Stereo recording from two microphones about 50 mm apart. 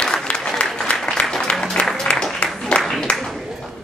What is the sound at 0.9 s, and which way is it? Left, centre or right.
Applause, left.